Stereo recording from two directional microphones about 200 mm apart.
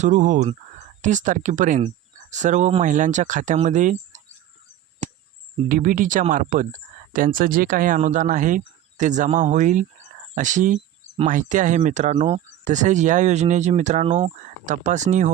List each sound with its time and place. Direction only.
0.0 s speech: 40° right (ahead or behind)
5.0 s cricket: 35° right (ahead or behind)
5.6 s speech: 45° right (ahead or behind)